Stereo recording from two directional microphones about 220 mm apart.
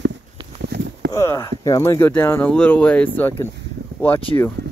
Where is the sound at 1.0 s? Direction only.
15° left (ahead or behind).